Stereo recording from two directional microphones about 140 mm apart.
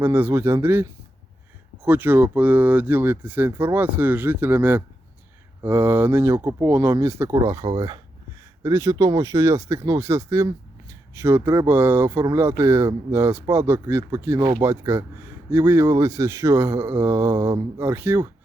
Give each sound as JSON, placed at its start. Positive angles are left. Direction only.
{"t": 0.0, "sound": "speech", "side_deg": -15}